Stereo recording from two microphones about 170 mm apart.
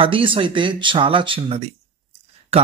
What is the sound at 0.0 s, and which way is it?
Speech, 30° right (ahead or behind).